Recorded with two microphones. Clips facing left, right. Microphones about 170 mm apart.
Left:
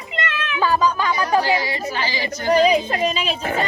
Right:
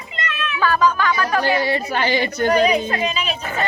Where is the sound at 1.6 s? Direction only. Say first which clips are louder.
Right 4 dB; 60° right (ahead or behind).